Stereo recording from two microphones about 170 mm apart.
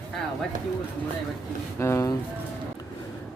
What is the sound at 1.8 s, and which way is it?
Speech, 15° left (ahead or behind).